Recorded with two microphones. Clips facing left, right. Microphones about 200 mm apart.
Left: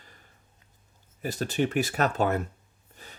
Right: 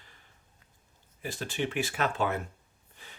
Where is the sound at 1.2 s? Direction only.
40° left (ahead or behind).